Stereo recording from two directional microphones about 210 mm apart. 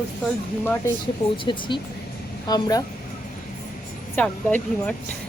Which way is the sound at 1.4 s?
20° left (ahead or behind).